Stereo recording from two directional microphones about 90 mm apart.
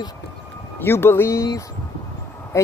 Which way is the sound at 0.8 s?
25° left (ahead or behind).